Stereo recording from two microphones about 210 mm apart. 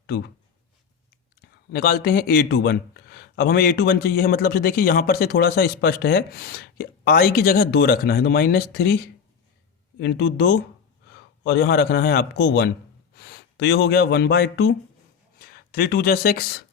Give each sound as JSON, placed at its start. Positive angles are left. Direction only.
{"t": 1.4, "sound": "speech", "side_deg": 45}
{"t": 10.0, "sound": "a man's voice", "side_deg": 55}